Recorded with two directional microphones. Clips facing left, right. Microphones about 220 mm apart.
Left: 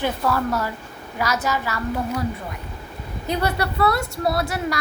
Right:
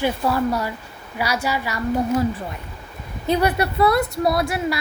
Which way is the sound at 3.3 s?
25° right (ahead or behind).